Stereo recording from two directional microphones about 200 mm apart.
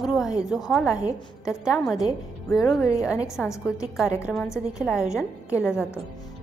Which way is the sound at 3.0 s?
5° right (ahead or behind).